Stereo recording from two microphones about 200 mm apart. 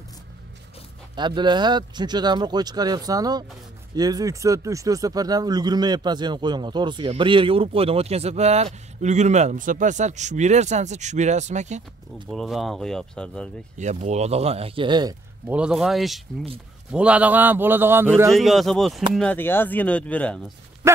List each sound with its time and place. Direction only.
1.1 s speech: 20° right (ahead or behind)
12.3 s speech: centre (ahead or behind)
13.7 s speech: 35° right (ahead or behind); by 15.5 s 20° right (ahead or behind)
15.5 s a man's voice: 5° right (ahead or behind)
18.3 s speech: centre (ahead or behind)
20.8 s dog: 15° right (ahead or behind)